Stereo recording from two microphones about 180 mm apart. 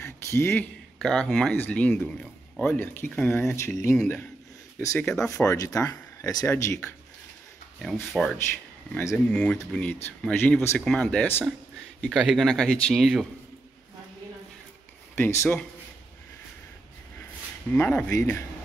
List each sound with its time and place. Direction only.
0.0 s a sound: 15° left (ahead or behind)
0.9 s speech: centre (ahead or behind)
7.8 s speech: centre (ahead or behind)
8.9 s speech: 10° left (ahead or behind)
15.1 s speech: 15° left (ahead or behind)
17.7 s speech: 10° left (ahead or behind)